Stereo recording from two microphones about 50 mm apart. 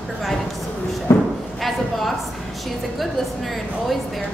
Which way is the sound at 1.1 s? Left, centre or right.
Left.